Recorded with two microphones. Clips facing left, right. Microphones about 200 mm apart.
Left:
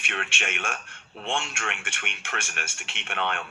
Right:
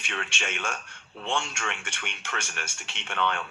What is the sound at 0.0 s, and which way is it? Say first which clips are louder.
Speech: left 1 dB; 60° left (ahead or behind).